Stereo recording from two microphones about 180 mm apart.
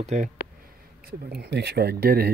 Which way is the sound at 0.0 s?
40° right (ahead or behind).